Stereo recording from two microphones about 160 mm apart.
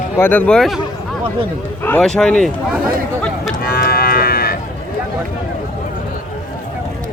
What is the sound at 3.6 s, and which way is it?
Cattle, 70° left (ahead or behind).